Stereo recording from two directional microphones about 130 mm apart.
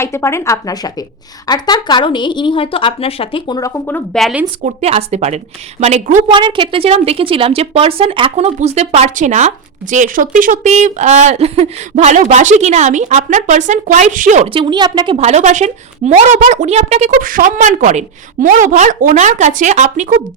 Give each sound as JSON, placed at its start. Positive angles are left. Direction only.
{"t": 0.0, "sound": "a woman's voice", "side_deg": 20}
{"t": 4.1, "sound": "speech", "side_deg": 0}
{"t": 4.6, "sound": "a woman's voice", "side_deg": -55}
{"t": 6.2, "sound": "a woman's voice", "side_deg": -40}
{"t": 9.9, "sound": "speech", "side_deg": -85}
{"t": 14.4, "sound": "a woman's voice", "side_deg": -40}
{"t": 15.2, "sound": "a woman's voice", "side_deg": -60}